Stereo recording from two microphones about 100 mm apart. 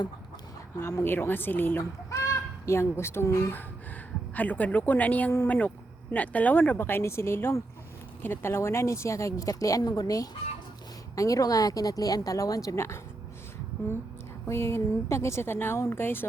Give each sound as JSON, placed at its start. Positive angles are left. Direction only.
{"t": 0.8, "sound": "speech", "side_deg": 25}
{"t": 4.4, "sound": "a woman's voice", "side_deg": 15}
{"t": 14.4, "sound": "speech", "side_deg": 25}